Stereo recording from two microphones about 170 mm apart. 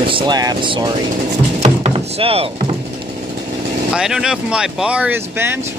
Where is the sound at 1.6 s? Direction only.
35° right (ahead or behind).